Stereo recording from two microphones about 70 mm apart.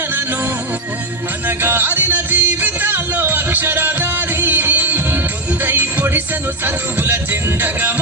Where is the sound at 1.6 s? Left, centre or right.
Right.